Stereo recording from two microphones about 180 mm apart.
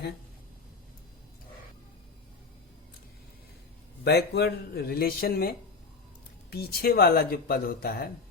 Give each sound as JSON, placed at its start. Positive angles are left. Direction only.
{"t": 4.0, "sound": "speech", "side_deg": 65}